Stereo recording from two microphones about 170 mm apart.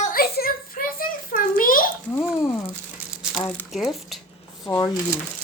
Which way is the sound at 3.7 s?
Centre (ahead or behind).